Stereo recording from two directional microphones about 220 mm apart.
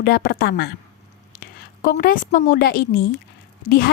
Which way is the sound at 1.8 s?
40° left (ahead or behind).